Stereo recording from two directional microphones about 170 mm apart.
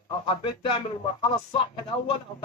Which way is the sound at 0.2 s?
30° left (ahead or behind).